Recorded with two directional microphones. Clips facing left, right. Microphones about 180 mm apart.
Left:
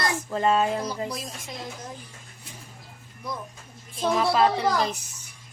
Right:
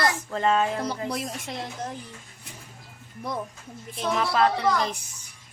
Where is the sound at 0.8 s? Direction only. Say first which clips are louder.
Right 2 dB; 65° right (ahead or behind).